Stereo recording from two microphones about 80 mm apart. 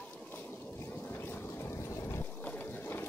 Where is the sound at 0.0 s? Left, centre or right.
Centre.